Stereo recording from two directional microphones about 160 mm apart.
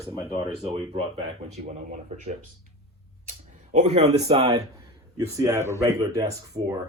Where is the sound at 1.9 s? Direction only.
50° right (ahead or behind); by 4.6 s 35° right (ahead or behind).